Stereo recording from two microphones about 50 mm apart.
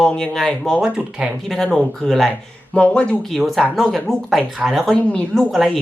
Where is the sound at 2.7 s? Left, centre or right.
Left.